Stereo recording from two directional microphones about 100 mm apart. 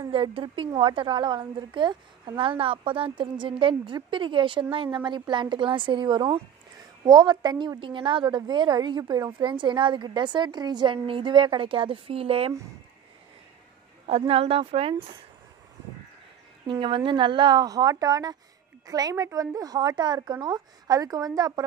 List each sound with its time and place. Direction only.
0.1 s a woman's voice: 60° right (ahead or behind); by 9.3 s 40° right (ahead or behind)
9.4 s a woman's voice: 50° right (ahead or behind); by 12.5 s 75° right (ahead or behind)
14.0 s a woman's voice: 80° right
16.8 s a woman's voice: 55° right (ahead or behind); by 21.6 s 40° right (ahead or behind)